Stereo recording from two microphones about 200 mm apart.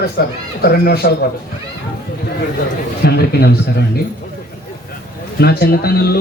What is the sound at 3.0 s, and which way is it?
Speech, 55° left (ahead or behind).